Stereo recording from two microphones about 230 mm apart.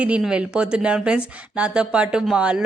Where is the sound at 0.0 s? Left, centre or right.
Centre.